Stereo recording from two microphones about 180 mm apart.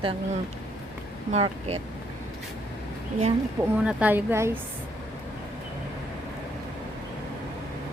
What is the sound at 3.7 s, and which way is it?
Speech, 10° right (ahead or behind).